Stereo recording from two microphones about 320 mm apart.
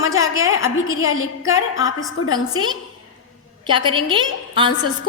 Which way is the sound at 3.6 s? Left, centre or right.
Centre.